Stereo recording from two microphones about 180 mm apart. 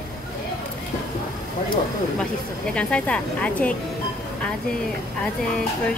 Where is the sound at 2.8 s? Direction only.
5° left (ahead or behind).